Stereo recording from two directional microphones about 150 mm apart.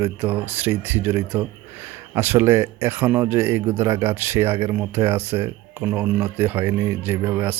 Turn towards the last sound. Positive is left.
turn(degrees=-10)  # may be behind; listen again after turning